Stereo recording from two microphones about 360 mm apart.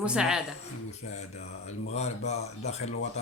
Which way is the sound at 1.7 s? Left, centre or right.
Centre.